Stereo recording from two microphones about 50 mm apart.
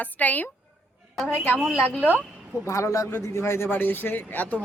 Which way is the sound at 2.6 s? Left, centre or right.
Left.